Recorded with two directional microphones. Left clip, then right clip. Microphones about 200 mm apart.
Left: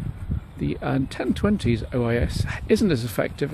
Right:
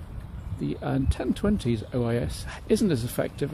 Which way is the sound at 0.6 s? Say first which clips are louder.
Left 3 dB; 25° left (ahead or behind).